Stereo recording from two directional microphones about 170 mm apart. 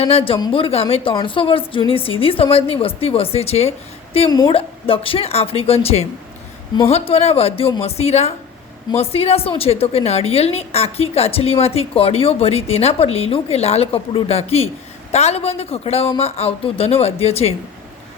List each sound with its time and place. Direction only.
0.0 s a woman's voice: 35° left (ahead or behind)
4.3 s a woman's voice: 25° left (ahead or behind)